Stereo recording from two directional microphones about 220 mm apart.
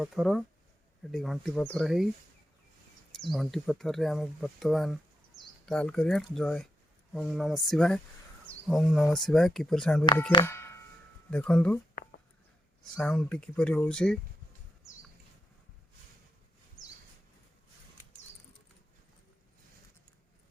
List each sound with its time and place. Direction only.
0.0 s speech: centre (ahead or behind)
3.1 s speech: centre (ahead or behind)
10.4 s music: 10° left (ahead or behind)
11.3 s speech: 5° left (ahead or behind)
13.0 s speech: 5° left (ahead or behind)